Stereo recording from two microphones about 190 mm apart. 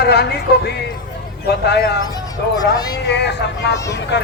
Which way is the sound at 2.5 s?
20° left (ahead or behind).